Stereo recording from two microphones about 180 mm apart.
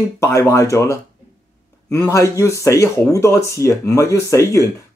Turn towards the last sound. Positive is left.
turn(degrees=15)  # may be behind; listen again after turning